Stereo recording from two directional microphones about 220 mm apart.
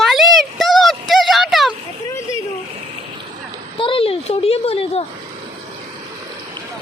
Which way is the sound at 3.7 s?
25° left (ahead or behind).